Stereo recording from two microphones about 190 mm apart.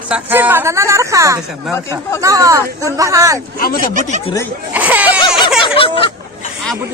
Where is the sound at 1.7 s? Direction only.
15° left (ahead or behind).